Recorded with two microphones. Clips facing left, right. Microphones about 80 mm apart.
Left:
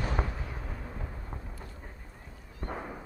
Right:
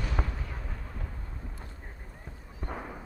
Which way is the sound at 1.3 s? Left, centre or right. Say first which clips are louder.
Left 2 dB; left.